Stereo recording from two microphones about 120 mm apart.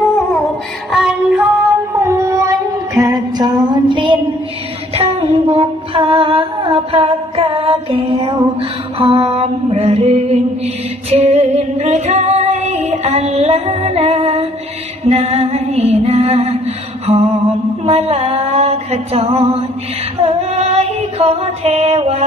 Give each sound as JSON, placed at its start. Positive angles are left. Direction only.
{"t": 0.9, "sound": "music", "side_deg": -10}
{"t": 2.0, "sound": "female singing", "side_deg": -25}
{"t": 3.1, "sound": "music", "side_deg": -35}
{"t": 4.9, "sound": "humming", "side_deg": -55}
{"t": 8.5, "sound": "mantra", "side_deg": -50}
{"t": 11.1, "sound": "music", "side_deg": -65}
{"t": 15.0, "sound": "mantra", "side_deg": -60}
{"t": 17.0, "sound": "mantra", "side_deg": -55}
{"t": 20.2, "sound": "female singing", "side_deg": -60}